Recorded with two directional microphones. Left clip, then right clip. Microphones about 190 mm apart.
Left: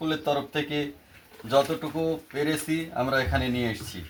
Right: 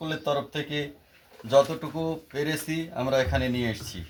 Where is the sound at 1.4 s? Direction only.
15° right (ahead or behind).